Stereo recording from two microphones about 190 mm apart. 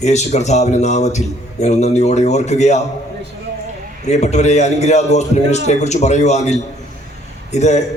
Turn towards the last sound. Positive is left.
turn(degrees=35)  # may be behind; listen again after turning